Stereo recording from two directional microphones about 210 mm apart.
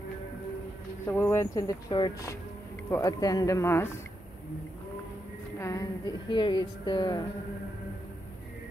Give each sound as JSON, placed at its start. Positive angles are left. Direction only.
{"t": 1.0, "sound": "speech", "side_deg": 10}
{"t": 5.6, "sound": "a woman's voice", "side_deg": 15}